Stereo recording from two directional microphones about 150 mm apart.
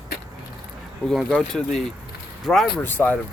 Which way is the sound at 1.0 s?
Centre (ahead or behind).